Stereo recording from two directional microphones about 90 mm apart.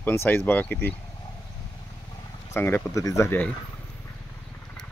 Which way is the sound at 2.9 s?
35° left (ahead or behind).